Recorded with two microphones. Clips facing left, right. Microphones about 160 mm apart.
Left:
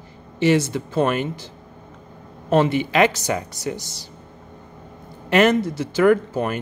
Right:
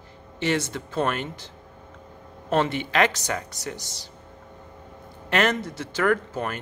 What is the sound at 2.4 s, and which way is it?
Speech, 10° left (ahead or behind).